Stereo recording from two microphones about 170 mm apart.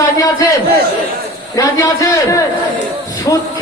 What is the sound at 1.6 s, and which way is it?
A man's voice, 20° left (ahead or behind).